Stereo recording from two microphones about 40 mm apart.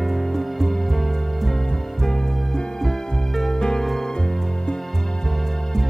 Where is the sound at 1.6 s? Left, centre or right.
Centre.